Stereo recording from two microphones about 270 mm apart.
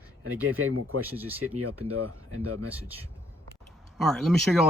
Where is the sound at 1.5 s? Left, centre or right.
Right.